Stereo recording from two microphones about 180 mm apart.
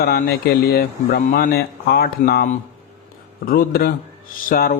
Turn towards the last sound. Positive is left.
turn(degrees=55)  # may be behind; listen again after turning